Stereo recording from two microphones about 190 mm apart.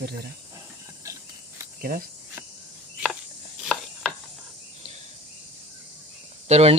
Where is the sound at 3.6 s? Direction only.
Centre (ahead or behind).